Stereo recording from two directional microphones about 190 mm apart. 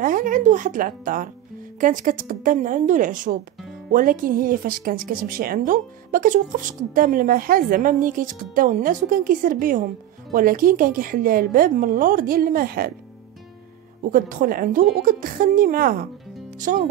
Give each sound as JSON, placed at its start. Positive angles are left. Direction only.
{"t": 0.0, "sound": "a woman's voice", "side_deg": -45}
{"t": 14.0, "sound": "a woman's voice", "side_deg": -45}